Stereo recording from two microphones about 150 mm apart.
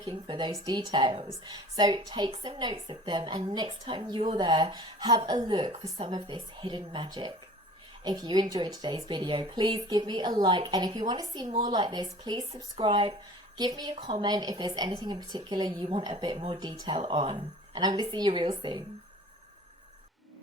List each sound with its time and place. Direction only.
0.0 s a woman's voice: 30° right (ahead or behind)